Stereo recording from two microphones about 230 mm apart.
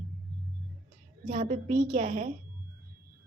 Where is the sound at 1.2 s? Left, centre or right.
Right.